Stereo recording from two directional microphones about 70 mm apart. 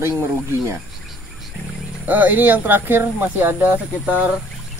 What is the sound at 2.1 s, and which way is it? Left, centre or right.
Speech, right.